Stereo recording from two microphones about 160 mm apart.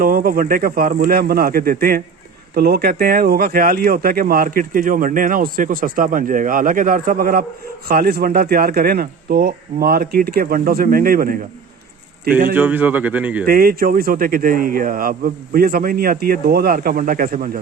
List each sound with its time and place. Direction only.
0.0 s speech: 65° right (ahead or behind)
2.6 s speech: 75° right (ahead or behind)
12.5 s speech: 10° right (ahead or behind)
13.4 s speech: 65° right (ahead or behind)